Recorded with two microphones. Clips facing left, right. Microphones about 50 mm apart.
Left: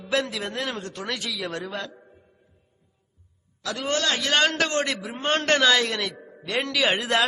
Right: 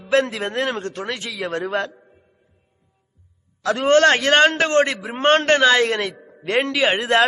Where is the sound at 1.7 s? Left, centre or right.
Right.